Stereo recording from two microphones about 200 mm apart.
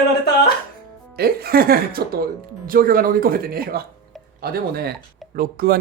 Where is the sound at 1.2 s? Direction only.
50° right (ahead or behind).